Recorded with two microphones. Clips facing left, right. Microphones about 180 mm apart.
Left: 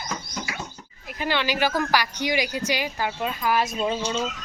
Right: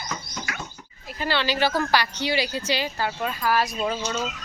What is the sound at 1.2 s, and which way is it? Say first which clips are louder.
Speech: even; 15° left (ahead or behind).